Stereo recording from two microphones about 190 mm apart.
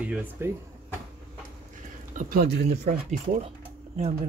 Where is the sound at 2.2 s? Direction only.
50° right (ahead or behind).